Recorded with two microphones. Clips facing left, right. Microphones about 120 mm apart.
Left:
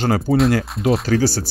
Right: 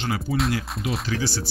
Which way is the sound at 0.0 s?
45° left (ahead or behind).